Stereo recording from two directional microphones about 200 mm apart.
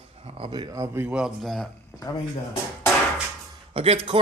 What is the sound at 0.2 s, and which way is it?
Speech, 30° right (ahead or behind).